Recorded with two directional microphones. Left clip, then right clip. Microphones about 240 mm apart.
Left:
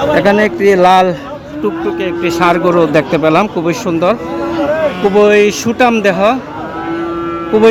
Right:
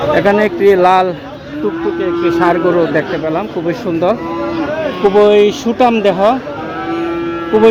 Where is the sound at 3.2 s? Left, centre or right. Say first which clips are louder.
Left 7 dB; left.